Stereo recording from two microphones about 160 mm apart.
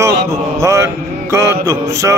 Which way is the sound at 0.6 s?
20° right (ahead or behind).